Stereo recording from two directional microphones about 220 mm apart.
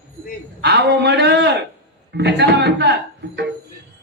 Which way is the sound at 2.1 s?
50° right (ahead or behind).